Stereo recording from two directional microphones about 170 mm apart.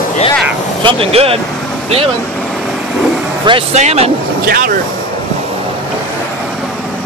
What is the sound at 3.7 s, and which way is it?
Speech, 40° right (ahead or behind).